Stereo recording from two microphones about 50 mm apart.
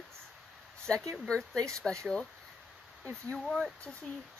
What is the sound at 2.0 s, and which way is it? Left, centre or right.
Speech, centre.